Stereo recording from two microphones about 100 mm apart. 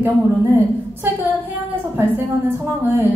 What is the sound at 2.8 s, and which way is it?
Speech, 20° right (ahead or behind).